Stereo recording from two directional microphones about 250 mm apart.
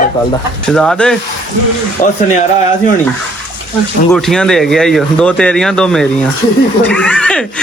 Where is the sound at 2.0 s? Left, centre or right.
Left.